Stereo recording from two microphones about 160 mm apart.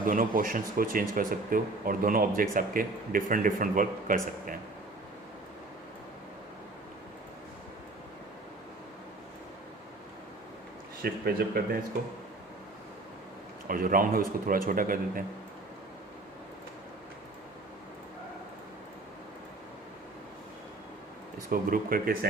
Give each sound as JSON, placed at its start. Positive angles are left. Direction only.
{"t": 0.0, "sound": "speech", "side_deg": -60}
{"t": 11.0, "sound": "speech", "side_deg": -70}
{"t": 13.7, "sound": "speech", "side_deg": -60}
{"t": 21.5, "sound": "speech", "side_deg": -65}